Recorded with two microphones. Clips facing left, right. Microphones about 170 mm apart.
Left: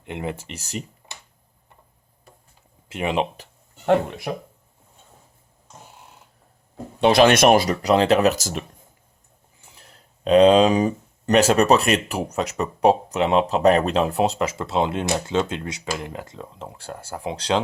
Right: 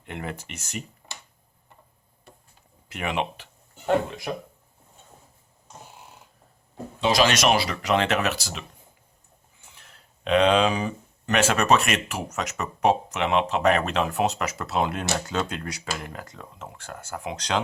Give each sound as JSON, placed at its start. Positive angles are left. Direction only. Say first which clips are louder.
{"t": 0.1, "sound": "speech", "louder": "left 5 dB", "side_deg": 25}
{"t": 2.9, "sound": "speech", "louder": "left 5 dB", "side_deg": 30}
{"t": 7.0, "sound": "speech", "louder": "left 7 dB", "side_deg": 55}
{"t": 9.7, "sound": "speech", "louder": "left 3 dB", "side_deg": 35}